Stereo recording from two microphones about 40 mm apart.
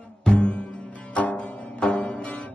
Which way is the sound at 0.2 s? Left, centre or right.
Left.